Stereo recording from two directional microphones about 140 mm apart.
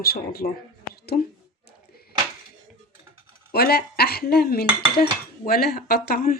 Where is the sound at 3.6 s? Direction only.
90° left.